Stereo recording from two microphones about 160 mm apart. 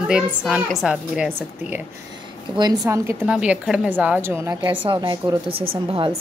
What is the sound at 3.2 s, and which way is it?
A woman's voice, 5° right (ahead or behind).